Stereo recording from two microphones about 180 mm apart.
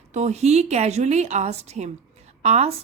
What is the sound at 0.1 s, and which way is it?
A woman's voice, 40° right (ahead or behind).